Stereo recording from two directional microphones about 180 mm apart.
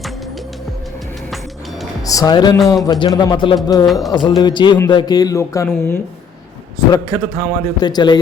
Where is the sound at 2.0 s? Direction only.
20° left (ahead or behind).